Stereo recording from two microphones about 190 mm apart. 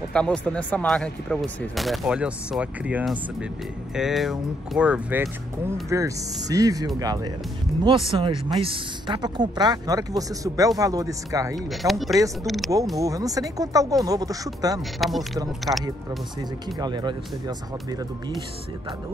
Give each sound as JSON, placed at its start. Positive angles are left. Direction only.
{"t": 0.1, "sound": "a woman's voice", "side_deg": 5}
{"t": 11.7, "sound": "speech", "side_deg": 0}
{"t": 13.0, "sound": "a woman's voice", "side_deg": -20}
{"t": 14.8, "sound": "speech", "side_deg": 0}
{"t": 16.3, "sound": "a woman's voice", "side_deg": -20}